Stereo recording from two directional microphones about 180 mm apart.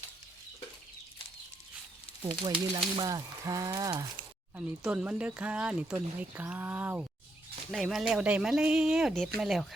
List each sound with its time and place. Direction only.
2.4 s speech: 25° right (ahead or behind)
4.5 s speech: 5° right (ahead or behind)